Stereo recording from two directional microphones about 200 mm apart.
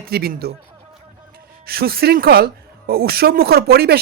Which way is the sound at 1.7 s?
50° right (ahead or behind).